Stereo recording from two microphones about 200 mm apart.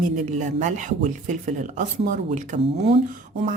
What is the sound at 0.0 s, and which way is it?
Speech, 40° right (ahead or behind).